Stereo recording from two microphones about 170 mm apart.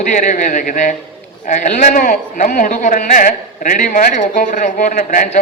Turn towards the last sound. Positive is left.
turn(degrees=50)  # may be behind; listen again after turning